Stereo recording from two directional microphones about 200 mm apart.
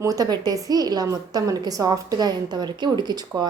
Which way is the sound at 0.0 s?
15° right (ahead or behind).